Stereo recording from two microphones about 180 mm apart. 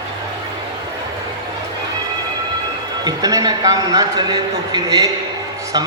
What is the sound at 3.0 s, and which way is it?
A man's voice, 20° right (ahead or behind).